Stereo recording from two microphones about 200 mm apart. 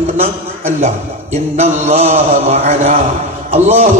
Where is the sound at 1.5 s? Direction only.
35° right (ahead or behind).